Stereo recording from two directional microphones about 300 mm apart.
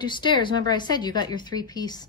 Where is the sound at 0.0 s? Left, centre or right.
Centre.